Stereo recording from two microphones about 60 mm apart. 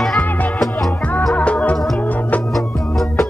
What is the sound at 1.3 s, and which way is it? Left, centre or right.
Music, left.